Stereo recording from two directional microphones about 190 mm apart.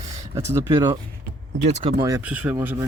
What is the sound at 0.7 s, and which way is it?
Speech, 20° right (ahead or behind).